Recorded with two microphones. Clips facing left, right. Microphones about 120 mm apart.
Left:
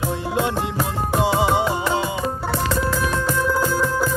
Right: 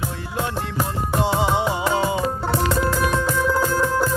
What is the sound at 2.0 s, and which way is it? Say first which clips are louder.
Music: right 3 dB; 30° right (ahead or behind).